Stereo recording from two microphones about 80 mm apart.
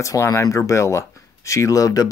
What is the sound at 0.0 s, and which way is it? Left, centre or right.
Speech, left.